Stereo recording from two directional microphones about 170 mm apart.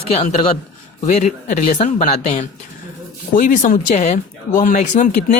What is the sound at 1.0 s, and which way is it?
Speech, 45° left (ahead or behind).